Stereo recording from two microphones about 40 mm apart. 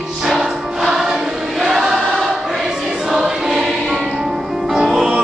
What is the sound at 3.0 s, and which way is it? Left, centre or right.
Choir, centre.